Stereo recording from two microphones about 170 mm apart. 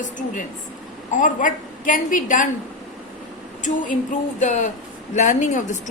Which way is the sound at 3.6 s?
50° left (ahead or behind).